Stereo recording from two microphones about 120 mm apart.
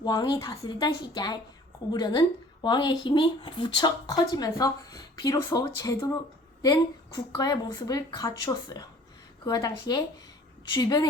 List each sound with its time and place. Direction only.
0.0 s speech: 30° left (ahead or behind)